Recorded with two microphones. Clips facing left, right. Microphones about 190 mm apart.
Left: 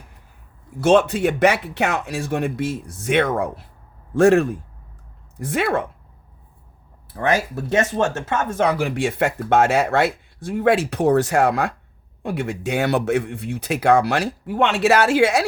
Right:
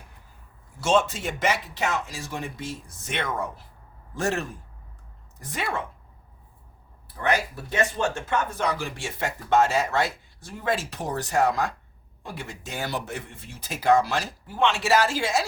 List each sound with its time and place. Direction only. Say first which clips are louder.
0.8 s speech: left 8 dB; 60° left (ahead or behind)
5.5 s speech: left 9 dB; 65° left (ahead or behind)
7.1 s speech: left 5 dB; 70° left (ahead or behind)